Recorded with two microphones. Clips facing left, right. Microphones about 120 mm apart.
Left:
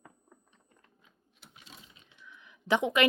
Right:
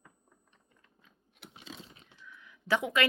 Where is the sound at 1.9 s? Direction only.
20° left (ahead or behind).